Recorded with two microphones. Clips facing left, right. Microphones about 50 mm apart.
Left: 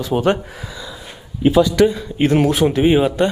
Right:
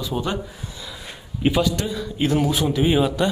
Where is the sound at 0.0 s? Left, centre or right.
Left.